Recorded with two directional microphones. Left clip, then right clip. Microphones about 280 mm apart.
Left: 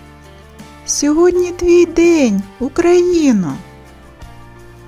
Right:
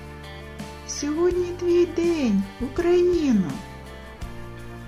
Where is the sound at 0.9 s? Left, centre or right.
Left.